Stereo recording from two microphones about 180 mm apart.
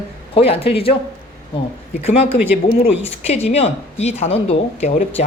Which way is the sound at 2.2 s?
10° right (ahead or behind).